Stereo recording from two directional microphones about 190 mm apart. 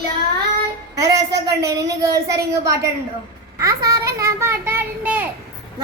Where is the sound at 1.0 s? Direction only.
20° right (ahead or behind).